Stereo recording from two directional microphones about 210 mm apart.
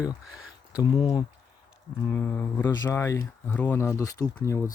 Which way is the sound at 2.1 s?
10° left (ahead or behind).